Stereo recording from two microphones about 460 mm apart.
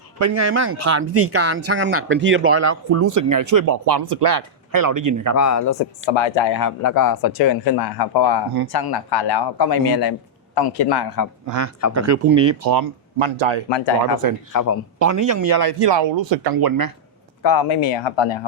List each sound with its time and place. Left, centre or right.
0.2 s speech: right
5.4 s speech: left
6.1 s speech: left
6.6 s a man's voice: left
11.4 s speech: right
13.1 s speech: right
13.7 s speech: left
14.5 s speech: left
14.9 s speech: right
17.4 s speech: left